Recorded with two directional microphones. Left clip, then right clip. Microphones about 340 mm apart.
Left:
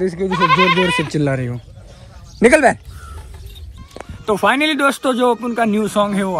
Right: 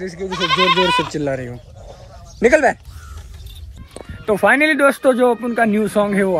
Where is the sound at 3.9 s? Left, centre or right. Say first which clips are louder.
Even; centre.